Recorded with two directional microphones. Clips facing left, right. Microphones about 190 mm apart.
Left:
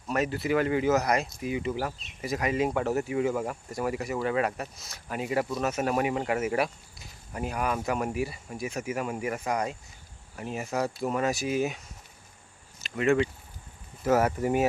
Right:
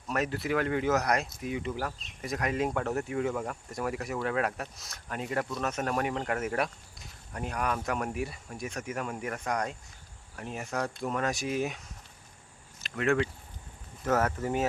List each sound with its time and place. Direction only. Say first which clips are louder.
0.1 s speech: left 3 dB; centre (ahead or behind)
12.8 s speech: left 3 dB; centre (ahead or behind)